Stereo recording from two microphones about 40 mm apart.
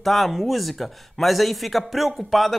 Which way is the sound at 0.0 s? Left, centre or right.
Centre.